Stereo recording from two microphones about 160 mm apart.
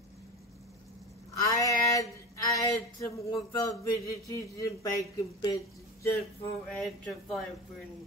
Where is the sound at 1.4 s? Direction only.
20° left (ahead or behind).